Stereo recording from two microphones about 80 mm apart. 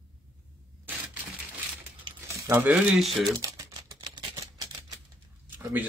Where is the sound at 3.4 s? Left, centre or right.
Right.